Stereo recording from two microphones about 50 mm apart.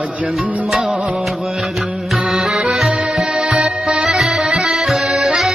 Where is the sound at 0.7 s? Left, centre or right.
Centre.